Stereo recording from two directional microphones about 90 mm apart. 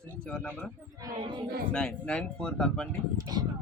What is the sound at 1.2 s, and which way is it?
Speech, 60° right (ahead or behind).